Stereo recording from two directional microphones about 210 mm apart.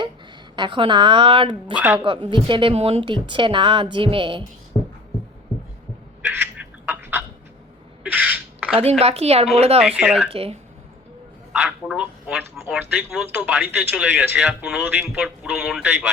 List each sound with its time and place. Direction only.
0.5 s a woman's voice: 20° right (ahead or behind)
1.7 s speech: 10° right (ahead or behind)
2.0 s a woman's voice: 25° right (ahead or behind)
6.2 s a sound: 10° right (ahead or behind)
8.8 s a woman's voice: 30° right (ahead or behind)
9.8 s speech: 5° right (ahead or behind)
10.3 s a woman's voice: 30° right (ahead or behind)
11.5 s speech: 5° right (ahead or behind)